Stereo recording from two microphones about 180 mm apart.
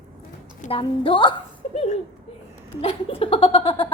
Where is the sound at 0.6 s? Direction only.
30° left (ahead or behind).